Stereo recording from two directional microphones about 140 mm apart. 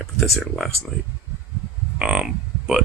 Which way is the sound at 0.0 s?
Centre (ahead or behind).